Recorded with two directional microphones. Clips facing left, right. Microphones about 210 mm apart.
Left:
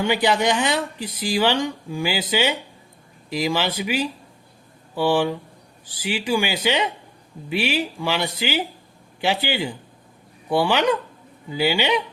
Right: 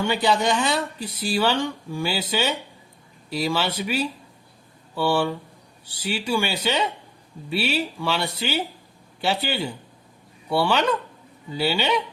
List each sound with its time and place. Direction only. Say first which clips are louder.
0.0 s speech: left 2 dB; 15° left (ahead or behind)
0.9 s speech: left 1 dB; 90° left
1.3 s speech: left 2 dB; 15° left (ahead or behind)